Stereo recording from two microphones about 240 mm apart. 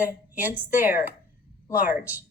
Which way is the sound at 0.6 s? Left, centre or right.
Centre.